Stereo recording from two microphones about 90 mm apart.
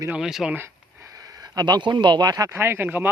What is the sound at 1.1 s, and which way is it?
Speech, 45° right (ahead or behind).